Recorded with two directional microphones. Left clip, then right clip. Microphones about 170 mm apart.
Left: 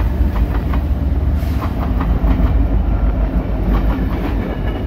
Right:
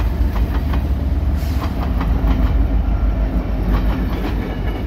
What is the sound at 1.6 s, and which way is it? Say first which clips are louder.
Train: left 2 dB; 15° right (ahead or behind).